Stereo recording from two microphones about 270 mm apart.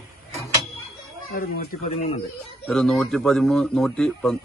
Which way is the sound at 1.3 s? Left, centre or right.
Left.